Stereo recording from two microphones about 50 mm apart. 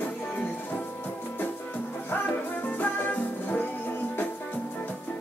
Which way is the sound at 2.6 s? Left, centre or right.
Left.